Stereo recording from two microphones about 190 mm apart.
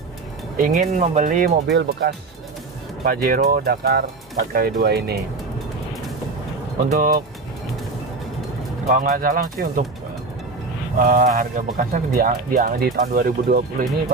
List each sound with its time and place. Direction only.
0.6 s speech: 45° right (ahead or behind)
1.7 s speech: 60° right (ahead or behind)
7.0 s speech: 50° right (ahead or behind)
8.8 s speech: 45° right (ahead or behind)
11.0 s speech: 45° right (ahead or behind)